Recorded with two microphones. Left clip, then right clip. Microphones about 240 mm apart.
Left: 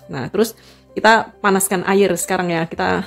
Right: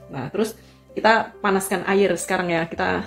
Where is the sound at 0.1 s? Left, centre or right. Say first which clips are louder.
Left 6 dB; left.